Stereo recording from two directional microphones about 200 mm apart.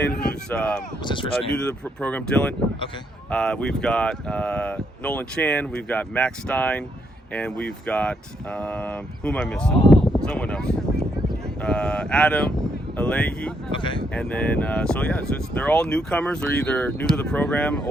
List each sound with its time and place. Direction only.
0.2 s a sound: 5° left (ahead or behind)
1.0 s speech: 25° left (ahead or behind)
1.6 s speech: 5° left (ahead or behind)
13.7 s speech: 25° left (ahead or behind)
14.1 s speech: 5° left (ahead or behind)